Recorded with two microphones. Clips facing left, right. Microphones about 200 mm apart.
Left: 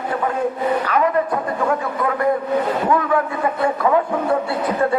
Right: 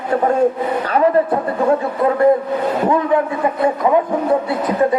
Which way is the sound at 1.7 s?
30° right (ahead or behind).